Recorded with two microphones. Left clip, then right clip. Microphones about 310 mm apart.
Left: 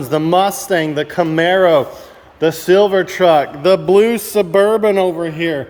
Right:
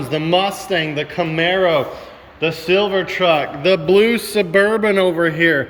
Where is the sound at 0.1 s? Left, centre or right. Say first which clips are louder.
Left 4 dB; centre.